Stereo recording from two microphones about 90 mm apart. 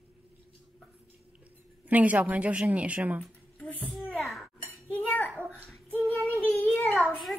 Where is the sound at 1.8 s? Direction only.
15° right (ahead or behind).